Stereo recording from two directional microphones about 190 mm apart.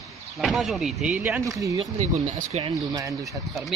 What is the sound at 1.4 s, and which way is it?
Speech, 15° right (ahead or behind).